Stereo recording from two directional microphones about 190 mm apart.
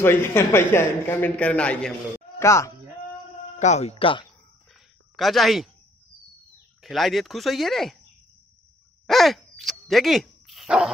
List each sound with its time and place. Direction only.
0.0 s speech: 10° left (ahead or behind)
3.5 s speech: 35° left (ahead or behind)
5.1 s speech: centre (ahead or behind)
6.8 s speech: centre (ahead or behind)
9.0 s dog: centre (ahead or behind)